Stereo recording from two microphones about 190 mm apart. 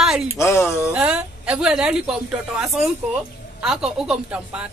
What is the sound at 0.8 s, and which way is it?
A woman's voice, 5° right (ahead or behind).